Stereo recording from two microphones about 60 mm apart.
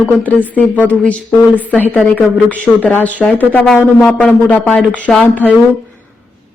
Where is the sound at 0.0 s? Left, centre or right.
Left.